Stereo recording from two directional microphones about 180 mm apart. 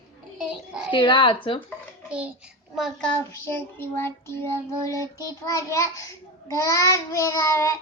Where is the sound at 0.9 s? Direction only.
25° left (ahead or behind).